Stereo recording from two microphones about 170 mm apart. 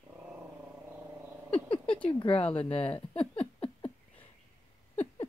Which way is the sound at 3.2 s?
35° left (ahead or behind).